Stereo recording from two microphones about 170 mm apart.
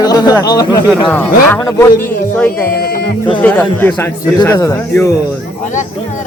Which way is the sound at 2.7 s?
65° left (ahead or behind).